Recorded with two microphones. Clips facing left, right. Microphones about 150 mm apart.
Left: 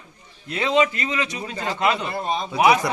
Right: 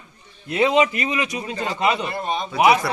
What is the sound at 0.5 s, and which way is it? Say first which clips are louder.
A man's voice: right 2 dB; 20° right (ahead or behind).